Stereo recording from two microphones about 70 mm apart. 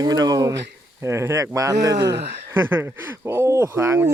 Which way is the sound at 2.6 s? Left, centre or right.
Right.